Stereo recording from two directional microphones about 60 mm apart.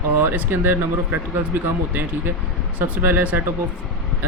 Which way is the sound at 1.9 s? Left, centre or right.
Right.